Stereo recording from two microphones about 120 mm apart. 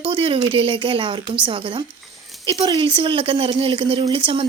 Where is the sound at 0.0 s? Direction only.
50° right (ahead or behind).